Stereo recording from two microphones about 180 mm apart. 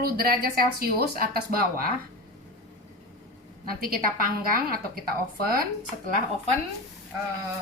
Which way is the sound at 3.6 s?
55° right (ahead or behind).